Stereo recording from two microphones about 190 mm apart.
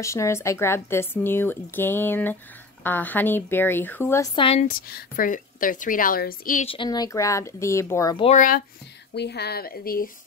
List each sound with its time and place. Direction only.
0.0 s speech: 15° left (ahead or behind)
4.4 s speech: 30° left (ahead or behind)
4.6 s a woman's voice: 50° left (ahead or behind)
6.6 s speech: 25° left (ahead or behind)
8.2 s a woman's voice: 40° left (ahead or behind)
9.1 s speech: 60° left (ahead or behind)